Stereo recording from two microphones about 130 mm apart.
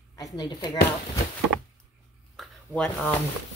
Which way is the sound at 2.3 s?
5° left (ahead or behind).